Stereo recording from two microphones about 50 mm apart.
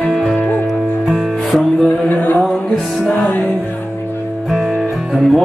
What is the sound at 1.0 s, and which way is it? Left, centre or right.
Music, centre.